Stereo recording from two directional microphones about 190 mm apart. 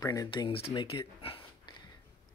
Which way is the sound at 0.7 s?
25° left (ahead or behind).